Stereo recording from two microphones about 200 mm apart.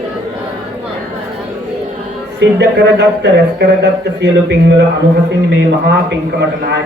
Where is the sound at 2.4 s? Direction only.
55° right (ahead or behind).